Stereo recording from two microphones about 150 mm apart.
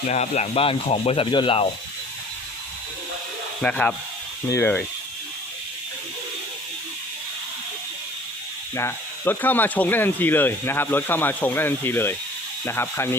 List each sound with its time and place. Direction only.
0.1 s speech: 45° left (ahead or behind)
3.6 s speech: 10° left (ahead or behind)
8.7 s speech: 15° left (ahead or behind)